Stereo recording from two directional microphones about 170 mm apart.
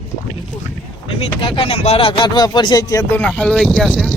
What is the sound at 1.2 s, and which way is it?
Speech, 35° left (ahead or behind).